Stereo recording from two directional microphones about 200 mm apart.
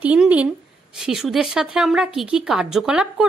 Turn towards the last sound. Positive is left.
turn(degrees=-5)  # may be behind; listen again after turning